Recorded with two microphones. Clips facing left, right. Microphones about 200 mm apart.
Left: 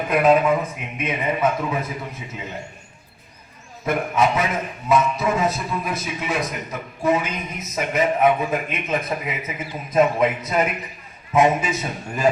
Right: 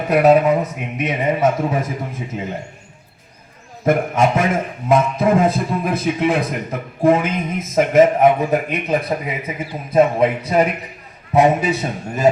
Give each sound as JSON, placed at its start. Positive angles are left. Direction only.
{"t": 0.1, "sound": "a man's voice", "side_deg": -40}
{"t": 3.8, "sound": "a man's voice", "side_deg": -50}